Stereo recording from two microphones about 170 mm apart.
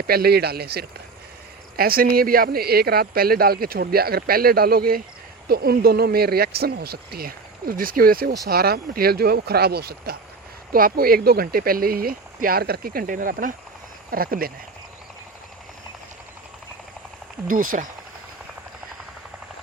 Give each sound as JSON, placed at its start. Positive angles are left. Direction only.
{"t": 0.1, "sound": "speech", "side_deg": -65}
{"t": 17.5, "sound": "speech", "side_deg": -55}